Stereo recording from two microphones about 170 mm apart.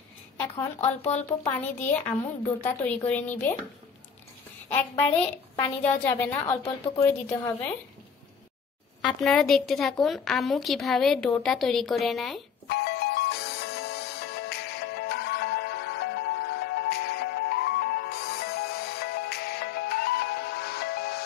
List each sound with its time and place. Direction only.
0.6 s speech: 10° left (ahead or behind)
5.6 s speech: 10° left (ahead or behind)
9.0 s a woman's voice: 5° left (ahead or behind)
12.6 s music: 70° left (ahead or behind)